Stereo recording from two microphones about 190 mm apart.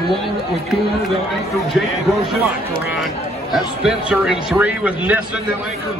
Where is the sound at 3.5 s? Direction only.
5° right (ahead or behind).